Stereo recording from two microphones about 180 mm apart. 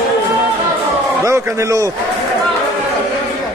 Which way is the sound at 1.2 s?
15° right (ahead or behind).